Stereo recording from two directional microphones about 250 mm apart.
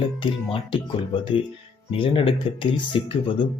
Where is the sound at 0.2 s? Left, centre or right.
Left.